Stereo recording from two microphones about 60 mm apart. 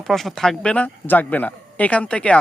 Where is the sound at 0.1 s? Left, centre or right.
Centre.